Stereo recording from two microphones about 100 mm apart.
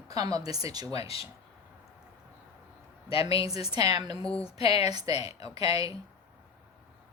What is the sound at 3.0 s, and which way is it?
Speech, 75° left (ahead or behind).